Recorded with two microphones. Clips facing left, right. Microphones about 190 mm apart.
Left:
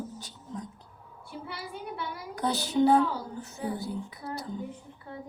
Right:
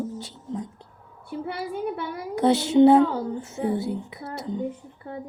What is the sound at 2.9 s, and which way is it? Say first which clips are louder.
Speech: right 7 dB; 70° right (ahead or behind).